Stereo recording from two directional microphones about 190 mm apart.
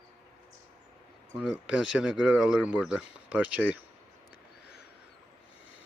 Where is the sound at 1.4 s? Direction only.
5° right (ahead or behind).